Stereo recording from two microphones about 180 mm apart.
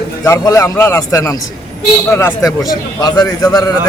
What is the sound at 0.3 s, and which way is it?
A man's voice, 15° left (ahead or behind).